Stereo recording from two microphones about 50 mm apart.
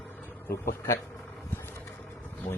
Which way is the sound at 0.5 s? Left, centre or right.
Left.